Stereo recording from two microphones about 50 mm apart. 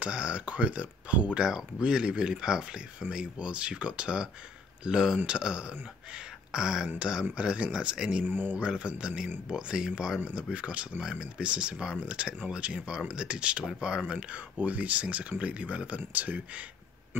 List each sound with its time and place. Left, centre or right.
0.0 s speech: right
1.4 s speech: centre
8.3 s speech: right
8.5 s speech: right
14.1 s speech: right